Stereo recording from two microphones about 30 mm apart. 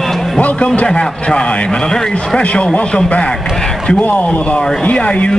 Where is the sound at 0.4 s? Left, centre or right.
Left.